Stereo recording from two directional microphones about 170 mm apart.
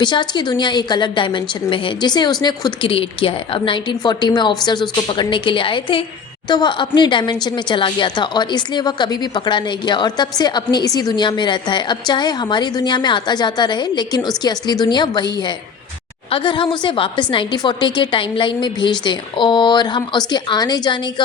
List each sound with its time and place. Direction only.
0.0 s a woman's voice: 25° left (ahead or behind)